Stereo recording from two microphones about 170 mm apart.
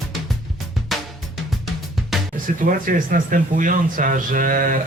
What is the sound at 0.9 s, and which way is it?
Drum kit, centre (ahead or behind).